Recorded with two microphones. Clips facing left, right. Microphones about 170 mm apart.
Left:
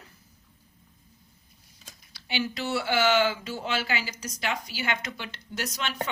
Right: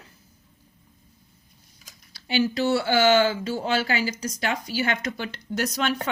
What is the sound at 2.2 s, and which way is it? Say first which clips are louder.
Speech: right 8 dB; 40° right (ahead or behind).